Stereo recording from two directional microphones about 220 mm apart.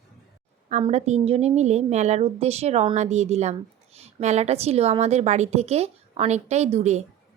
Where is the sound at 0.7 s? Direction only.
30° right (ahead or behind).